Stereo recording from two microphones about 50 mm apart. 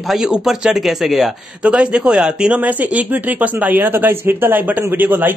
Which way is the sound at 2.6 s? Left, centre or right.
Right.